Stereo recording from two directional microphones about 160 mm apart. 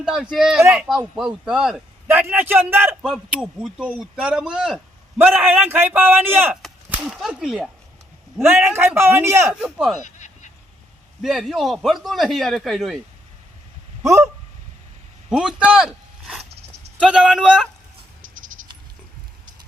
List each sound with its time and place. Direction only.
0.0 s a man's voice: centre (ahead or behind)
8.6 s a man's voice: 15° right (ahead or behind)
10.0 s quack: 50° left (ahead or behind)
11.2 s a man's voice: centre (ahead or behind)
14.0 s fowl: 20° right (ahead or behind)
15.3 s a sound: 5° right (ahead or behind)
17.0 s a man's voice: 5° right (ahead or behind)